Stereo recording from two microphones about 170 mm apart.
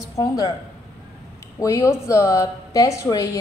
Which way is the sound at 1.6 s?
20° left (ahead or behind).